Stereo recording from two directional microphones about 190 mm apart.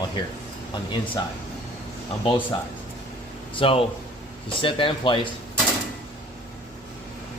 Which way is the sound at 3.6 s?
30° left (ahead or behind).